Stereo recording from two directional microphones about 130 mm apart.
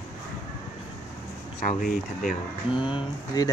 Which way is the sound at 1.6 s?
90° left.